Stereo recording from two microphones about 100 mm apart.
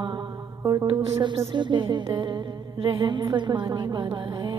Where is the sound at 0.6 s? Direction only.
30° right (ahead or behind).